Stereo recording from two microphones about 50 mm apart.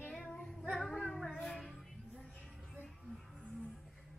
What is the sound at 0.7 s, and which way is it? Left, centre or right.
Music, centre.